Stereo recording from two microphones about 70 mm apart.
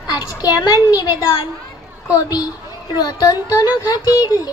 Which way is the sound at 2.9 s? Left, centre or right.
Left.